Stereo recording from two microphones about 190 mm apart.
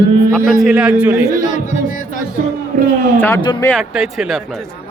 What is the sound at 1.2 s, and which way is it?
Speech, 40° left (ahead or behind).